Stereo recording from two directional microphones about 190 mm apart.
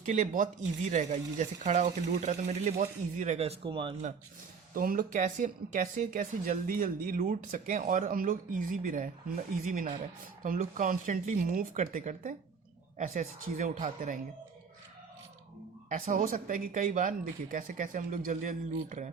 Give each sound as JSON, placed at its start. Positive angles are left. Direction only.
{"t": 0.0, "sound": "speech", "side_deg": -40}
{"t": 4.7, "sound": "speech", "side_deg": -45}
{"t": 15.9, "sound": "speech", "side_deg": -45}